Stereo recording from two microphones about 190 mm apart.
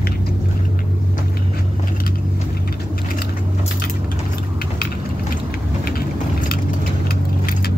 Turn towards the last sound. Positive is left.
turn(degrees=55)  # may be behind; listen again after turning